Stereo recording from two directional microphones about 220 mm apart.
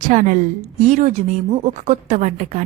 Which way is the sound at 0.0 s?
35° right (ahead or behind).